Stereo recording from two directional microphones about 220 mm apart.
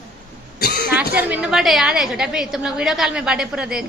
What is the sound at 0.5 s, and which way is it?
Cough, 45° left (ahead or behind).